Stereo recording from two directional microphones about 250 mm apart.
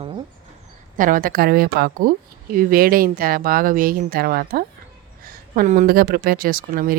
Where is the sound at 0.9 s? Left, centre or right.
Right.